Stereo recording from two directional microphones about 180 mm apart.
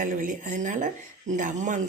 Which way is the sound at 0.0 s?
50° right (ahead or behind).